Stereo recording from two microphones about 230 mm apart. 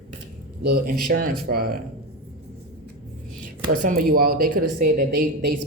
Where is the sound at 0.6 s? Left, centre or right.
Right.